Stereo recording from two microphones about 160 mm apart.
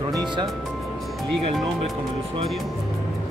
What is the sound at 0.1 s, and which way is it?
Music, 30° right (ahead or behind).